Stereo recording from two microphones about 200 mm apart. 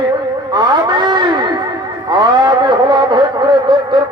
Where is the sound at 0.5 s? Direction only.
20° right (ahead or behind).